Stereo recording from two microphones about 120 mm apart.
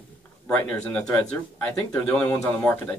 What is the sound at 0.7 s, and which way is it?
Speech, 10° left (ahead or behind).